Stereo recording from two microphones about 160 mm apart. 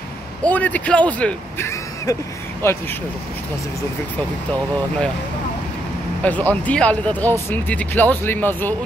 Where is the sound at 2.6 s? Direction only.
15° left (ahead or behind).